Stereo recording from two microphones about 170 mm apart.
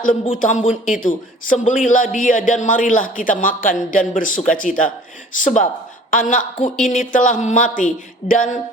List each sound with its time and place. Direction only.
0.3 s a man's voice: 45° left (ahead or behind)